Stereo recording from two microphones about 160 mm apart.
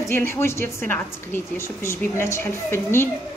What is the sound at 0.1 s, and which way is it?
A woman's voice, 15° left (ahead or behind).